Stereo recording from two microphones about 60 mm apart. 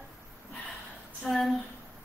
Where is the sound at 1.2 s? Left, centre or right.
Centre.